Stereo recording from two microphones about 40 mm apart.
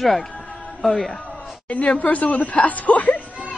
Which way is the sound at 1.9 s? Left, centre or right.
Left.